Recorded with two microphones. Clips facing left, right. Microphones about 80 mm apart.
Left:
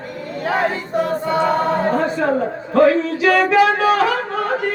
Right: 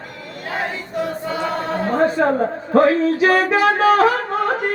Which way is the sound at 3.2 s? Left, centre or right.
Right.